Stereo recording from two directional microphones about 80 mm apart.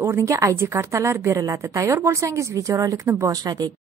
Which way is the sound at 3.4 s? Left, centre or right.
Right.